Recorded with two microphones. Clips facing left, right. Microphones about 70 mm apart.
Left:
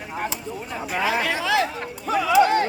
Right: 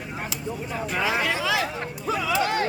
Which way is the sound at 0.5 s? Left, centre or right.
Right.